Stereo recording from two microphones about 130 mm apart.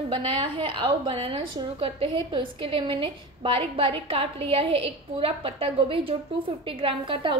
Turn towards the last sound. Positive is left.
turn(degrees=-40)  # may be behind; listen again after turning